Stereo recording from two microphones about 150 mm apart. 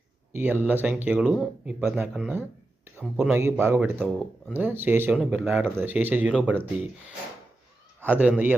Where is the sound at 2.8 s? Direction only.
15° right (ahead or behind).